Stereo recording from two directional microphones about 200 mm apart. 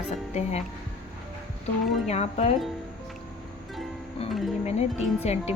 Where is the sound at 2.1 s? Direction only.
35° left (ahead or behind).